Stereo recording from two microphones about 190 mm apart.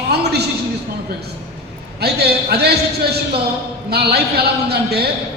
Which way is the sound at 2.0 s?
60° right (ahead or behind).